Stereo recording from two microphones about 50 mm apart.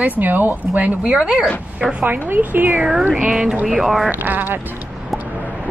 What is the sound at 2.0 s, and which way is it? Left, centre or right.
Speech, right.